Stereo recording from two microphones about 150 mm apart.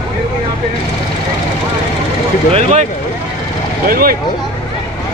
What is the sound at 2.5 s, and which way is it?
Speech, 50° right (ahead or behind).